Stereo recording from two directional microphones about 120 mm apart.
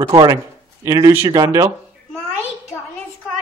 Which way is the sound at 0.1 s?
35° right (ahead or behind).